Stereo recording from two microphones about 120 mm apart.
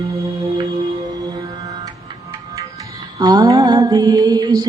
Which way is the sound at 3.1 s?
35° right (ahead or behind).